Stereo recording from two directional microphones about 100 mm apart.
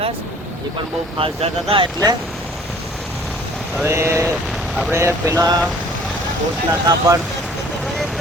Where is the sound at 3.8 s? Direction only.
25° right (ahead or behind).